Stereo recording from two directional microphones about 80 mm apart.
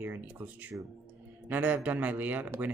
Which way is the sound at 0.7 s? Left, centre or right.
Right.